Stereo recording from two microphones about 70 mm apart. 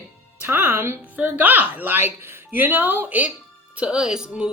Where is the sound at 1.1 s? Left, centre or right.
Right.